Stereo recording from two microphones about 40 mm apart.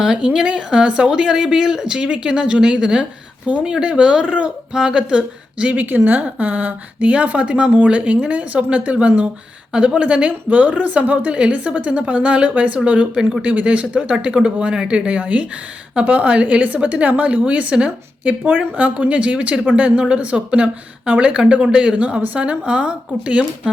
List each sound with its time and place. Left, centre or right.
0.0 s a woman's voice: centre
5.7 s a woman's voice: right
11.3 s a woman's voice: right
17.8 s a woman's voice: right